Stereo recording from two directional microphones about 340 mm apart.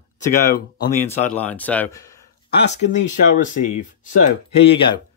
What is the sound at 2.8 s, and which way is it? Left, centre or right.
Speech, left.